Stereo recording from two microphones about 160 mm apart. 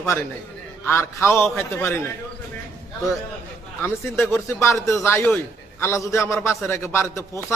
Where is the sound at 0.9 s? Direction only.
15° left (ahead or behind).